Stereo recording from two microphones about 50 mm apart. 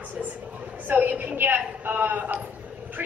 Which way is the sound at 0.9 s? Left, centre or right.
Right.